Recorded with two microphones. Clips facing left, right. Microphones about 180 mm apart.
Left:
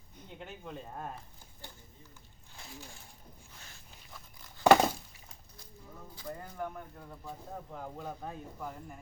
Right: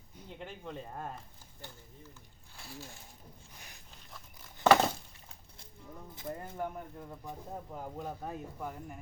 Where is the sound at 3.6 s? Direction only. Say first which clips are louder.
Right 1 dB; 15° right (ahead or behind).